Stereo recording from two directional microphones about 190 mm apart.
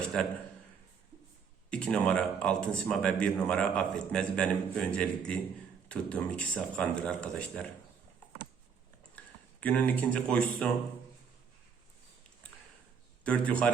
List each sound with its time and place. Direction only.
1.7 s speech: 5° left (ahead or behind)
9.1 s speech: 10° left (ahead or behind)
13.2 s a man's voice: 5° left (ahead or behind)